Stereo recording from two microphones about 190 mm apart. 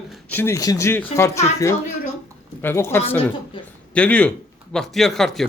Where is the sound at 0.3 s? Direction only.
10° left (ahead or behind).